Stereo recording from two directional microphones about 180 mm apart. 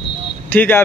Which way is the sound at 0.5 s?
10° left (ahead or behind).